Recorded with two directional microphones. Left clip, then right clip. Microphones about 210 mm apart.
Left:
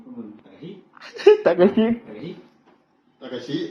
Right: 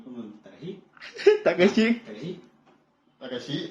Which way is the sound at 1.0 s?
15° right (ahead or behind).